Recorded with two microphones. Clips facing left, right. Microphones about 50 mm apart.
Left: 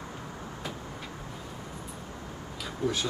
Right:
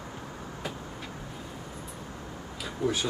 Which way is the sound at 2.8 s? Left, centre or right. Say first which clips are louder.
Right 1 dB; centre.